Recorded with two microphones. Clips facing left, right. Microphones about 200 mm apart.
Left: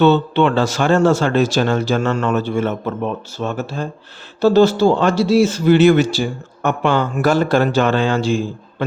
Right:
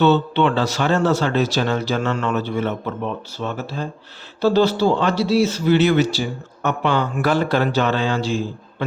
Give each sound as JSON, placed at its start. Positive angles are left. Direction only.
{"t": 0.0, "sound": "speech", "side_deg": 50}